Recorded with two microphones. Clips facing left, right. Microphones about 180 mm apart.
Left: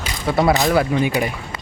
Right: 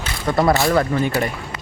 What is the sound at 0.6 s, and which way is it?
Speech, 5° left (ahead or behind).